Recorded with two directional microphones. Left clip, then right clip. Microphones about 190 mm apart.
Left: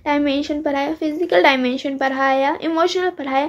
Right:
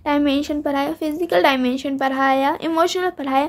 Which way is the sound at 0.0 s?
25° right (ahead or behind).